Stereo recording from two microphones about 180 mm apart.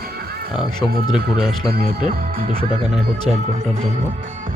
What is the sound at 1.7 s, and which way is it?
Speech, 55° right (ahead or behind).